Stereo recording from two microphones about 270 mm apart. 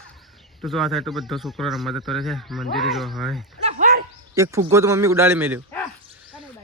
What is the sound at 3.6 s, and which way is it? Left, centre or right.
Dog, right.